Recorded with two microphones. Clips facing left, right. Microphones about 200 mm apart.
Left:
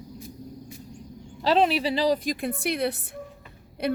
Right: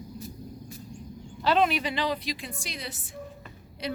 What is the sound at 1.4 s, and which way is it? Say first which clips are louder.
A woman's voice: left 3 dB; 35° left (ahead or behind).